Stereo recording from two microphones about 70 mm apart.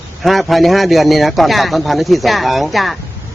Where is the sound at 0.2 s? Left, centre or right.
Centre.